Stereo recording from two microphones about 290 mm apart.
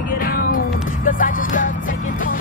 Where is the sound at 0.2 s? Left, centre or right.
Left.